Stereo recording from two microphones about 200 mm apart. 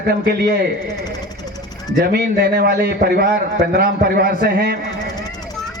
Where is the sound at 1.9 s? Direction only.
55° right (ahead or behind).